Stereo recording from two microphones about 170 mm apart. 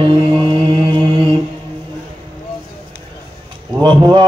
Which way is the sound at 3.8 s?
30° right (ahead or behind).